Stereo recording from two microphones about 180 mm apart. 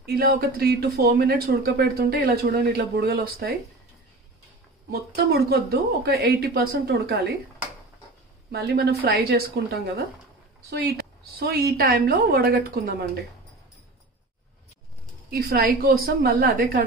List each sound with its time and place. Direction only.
0.0 s speech: 60° right (ahead or behind)
4.9 s speech: 60° right (ahead or behind)
8.5 s speech: 65° right (ahead or behind)
15.3 s speech: 55° right (ahead or behind)